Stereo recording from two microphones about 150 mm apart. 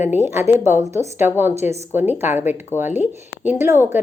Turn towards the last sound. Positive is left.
turn(degrees=-15)  # may be behind; listen again after turning